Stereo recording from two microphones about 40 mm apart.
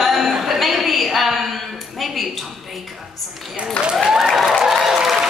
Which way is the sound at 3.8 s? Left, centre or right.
Left.